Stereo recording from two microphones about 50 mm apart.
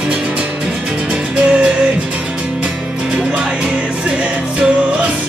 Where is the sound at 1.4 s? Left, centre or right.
Right.